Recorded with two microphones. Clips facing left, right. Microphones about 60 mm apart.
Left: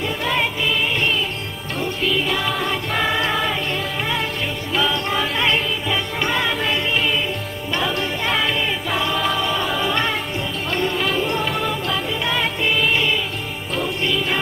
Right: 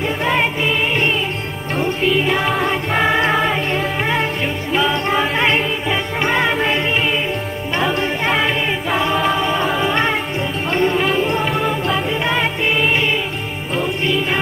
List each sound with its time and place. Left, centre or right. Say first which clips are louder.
0.2 s music: right 4 dB; right
8.9 s a capella: right 5 dB; right
10.7 s music: right 5 dB; right